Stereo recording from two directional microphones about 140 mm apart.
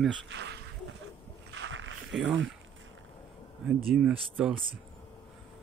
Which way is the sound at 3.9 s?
5° right (ahead or behind).